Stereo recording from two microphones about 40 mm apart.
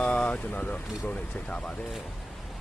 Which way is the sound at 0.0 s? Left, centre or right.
Left.